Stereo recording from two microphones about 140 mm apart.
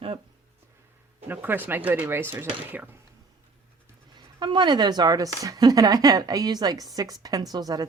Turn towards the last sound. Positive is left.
turn(degrees=-25)  # may be behind; listen again after turning